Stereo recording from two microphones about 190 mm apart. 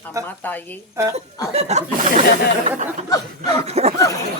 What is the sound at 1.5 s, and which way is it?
Speech, 35° right (ahead or behind).